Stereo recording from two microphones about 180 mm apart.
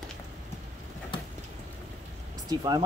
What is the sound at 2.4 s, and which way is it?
Speech, 20° right (ahead or behind).